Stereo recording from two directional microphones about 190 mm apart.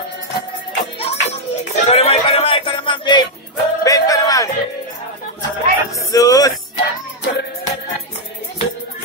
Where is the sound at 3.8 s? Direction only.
20° left (ahead or behind).